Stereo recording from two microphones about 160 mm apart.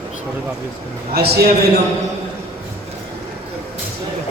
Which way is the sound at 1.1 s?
80° right.